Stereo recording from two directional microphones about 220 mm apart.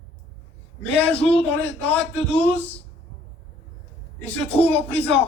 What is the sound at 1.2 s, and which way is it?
Speech, 25° left (ahead or behind).